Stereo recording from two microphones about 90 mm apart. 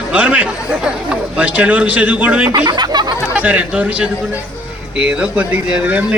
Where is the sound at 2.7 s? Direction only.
55° right (ahead or behind).